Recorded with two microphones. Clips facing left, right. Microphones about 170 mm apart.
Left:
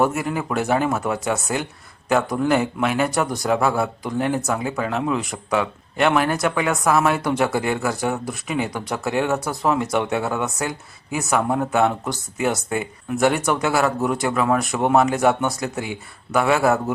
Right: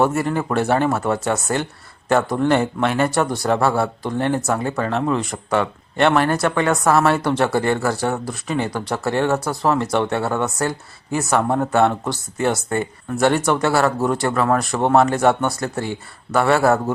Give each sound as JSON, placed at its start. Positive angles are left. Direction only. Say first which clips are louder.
{"t": 0.0, "sound": "speech", "louder": "right 2 dB", "side_deg": 5}
{"t": 11.2, "sound": "speech", "louder": "right 2 dB", "side_deg": 5}